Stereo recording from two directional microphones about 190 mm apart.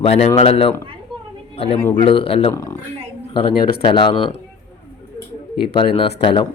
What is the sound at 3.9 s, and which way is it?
Speech, 25° left (ahead or behind).